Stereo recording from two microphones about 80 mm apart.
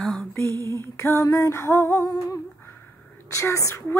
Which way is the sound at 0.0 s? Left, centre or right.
Centre.